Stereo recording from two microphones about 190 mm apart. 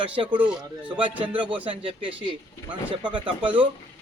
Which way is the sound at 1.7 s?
25° right (ahead or behind).